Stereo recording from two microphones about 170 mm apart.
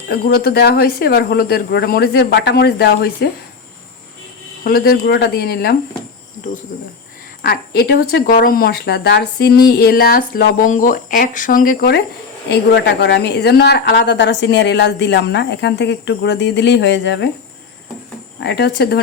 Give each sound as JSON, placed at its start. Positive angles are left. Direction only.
{"t": 0.1, "sound": "speech", "side_deg": 65}
{"t": 4.6, "sound": "speech", "side_deg": 60}
{"t": 7.4, "sound": "speech", "side_deg": 70}
{"t": 12.5, "sound": "speech", "side_deg": 90}
{"t": 18.3, "sound": "speech", "side_deg": 80}